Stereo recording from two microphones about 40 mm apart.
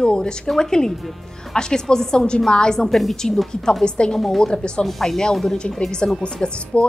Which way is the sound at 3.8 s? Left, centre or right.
Left.